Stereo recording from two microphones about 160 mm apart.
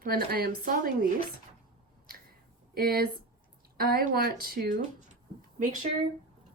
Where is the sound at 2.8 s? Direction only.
70° right (ahead or behind).